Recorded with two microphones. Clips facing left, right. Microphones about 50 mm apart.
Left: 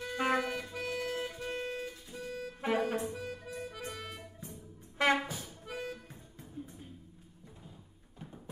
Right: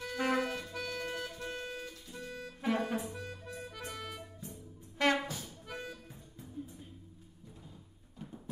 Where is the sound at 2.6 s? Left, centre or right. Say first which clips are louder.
Left 2 dB; left.